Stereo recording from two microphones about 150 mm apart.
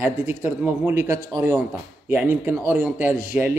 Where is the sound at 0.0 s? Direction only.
15° right (ahead or behind).